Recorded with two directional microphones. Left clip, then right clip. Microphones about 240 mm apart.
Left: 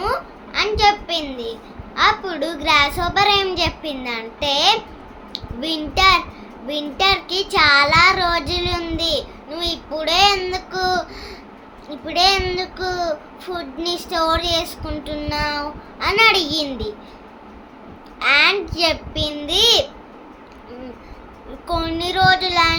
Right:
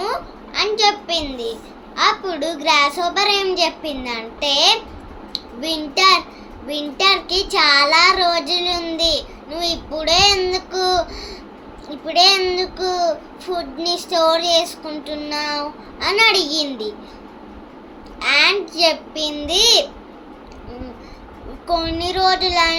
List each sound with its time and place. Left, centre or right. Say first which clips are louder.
0.0 s a sound: left 1 dB; centre
2.0 s a child's voice: even; centre
18.2 s a child's voice: even; centre
21.7 s child singing: right 2 dB; left